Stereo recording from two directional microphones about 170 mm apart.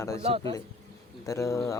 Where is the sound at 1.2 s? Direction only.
15° left (ahead or behind).